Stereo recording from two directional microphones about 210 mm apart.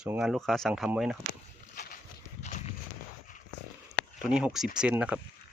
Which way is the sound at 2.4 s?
35° left (ahead or behind).